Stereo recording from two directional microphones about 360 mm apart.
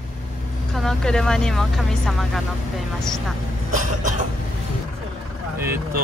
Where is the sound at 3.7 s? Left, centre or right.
Right.